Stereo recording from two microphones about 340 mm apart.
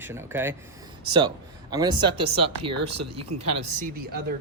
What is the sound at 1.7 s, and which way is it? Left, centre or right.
Speech, centre.